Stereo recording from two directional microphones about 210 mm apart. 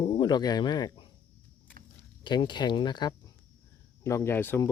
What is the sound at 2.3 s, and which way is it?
Speech, 20° left (ahead or behind).